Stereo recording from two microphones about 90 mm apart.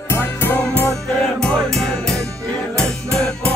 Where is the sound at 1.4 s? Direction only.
5° left (ahead or behind).